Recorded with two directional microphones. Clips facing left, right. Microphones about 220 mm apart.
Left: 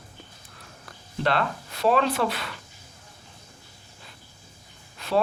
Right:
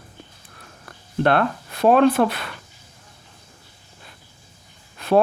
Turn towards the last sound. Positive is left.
turn(degrees=-55)  # may be behind; listen again after turning